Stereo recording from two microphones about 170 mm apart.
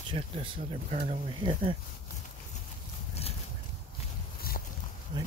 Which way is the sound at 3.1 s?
35° left (ahead or behind).